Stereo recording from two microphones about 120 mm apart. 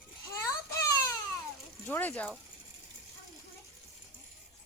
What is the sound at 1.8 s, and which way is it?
Speech, 15° left (ahead or behind).